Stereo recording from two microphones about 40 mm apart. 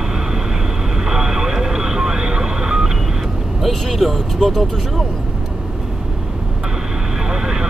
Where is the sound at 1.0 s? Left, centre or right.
Centre.